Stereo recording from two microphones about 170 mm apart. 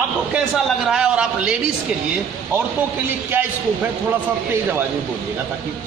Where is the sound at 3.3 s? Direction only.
10° right (ahead or behind).